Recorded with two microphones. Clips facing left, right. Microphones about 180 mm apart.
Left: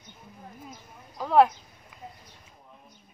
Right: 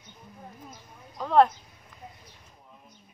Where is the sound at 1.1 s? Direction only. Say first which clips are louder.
Even; 5° left (ahead or behind).